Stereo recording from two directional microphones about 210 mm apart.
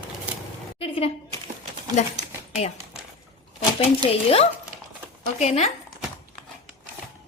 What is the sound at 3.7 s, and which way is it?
Speech, 25° left (ahead or behind).